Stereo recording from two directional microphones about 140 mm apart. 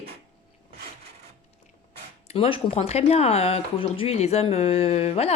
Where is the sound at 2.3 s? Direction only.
40° left (ahead or behind).